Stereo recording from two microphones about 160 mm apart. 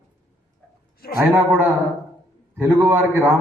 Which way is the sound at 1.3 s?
15° right (ahead or behind).